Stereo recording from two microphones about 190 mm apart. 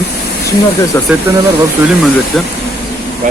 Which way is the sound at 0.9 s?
10° left (ahead or behind).